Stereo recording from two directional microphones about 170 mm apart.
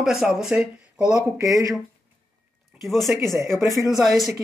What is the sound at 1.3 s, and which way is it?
Speech, 20° right (ahead or behind).